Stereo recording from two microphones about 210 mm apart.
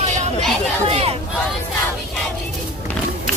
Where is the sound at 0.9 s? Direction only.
30° right (ahead or behind).